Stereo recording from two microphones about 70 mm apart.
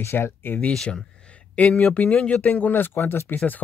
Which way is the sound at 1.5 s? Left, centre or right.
Centre.